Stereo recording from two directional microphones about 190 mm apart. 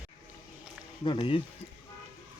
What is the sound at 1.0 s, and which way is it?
Speech, 25° left (ahead or behind).